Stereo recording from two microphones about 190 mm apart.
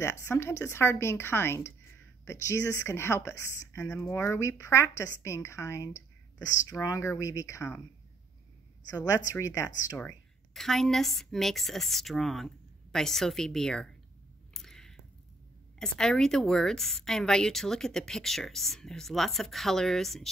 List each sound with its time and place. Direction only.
0.0 s speech: 15° left (ahead or behind)
8.9 s a woman's voice: 15° left (ahead or behind)
14.5 s a sound: centre (ahead or behind)
15.8 s a woman's voice: 5° left (ahead or behind)